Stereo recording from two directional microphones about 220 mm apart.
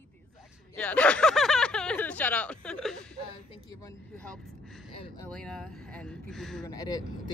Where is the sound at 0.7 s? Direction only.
5° left (ahead or behind).